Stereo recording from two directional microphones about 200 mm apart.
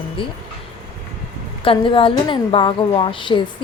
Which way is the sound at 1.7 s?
25° left (ahead or behind).